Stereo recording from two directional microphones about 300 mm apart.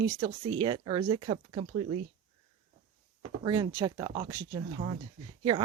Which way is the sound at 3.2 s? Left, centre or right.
Centre.